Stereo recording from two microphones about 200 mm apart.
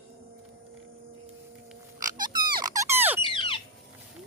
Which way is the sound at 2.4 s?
20° right (ahead or behind).